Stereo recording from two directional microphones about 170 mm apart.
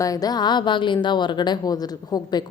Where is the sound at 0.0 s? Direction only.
20° left (ahead or behind).